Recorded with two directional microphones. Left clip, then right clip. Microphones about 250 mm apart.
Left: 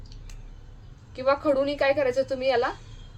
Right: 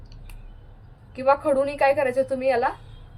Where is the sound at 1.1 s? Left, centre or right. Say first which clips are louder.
Right 3 dB; centre.